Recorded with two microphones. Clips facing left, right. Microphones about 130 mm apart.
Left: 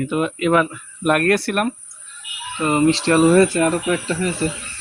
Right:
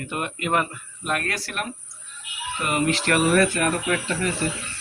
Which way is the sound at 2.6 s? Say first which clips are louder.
Left 7 dB; 30° left (ahead or behind).